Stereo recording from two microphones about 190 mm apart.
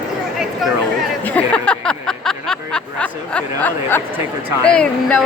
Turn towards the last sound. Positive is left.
turn(degrees=5)  # may be behind; listen again after turning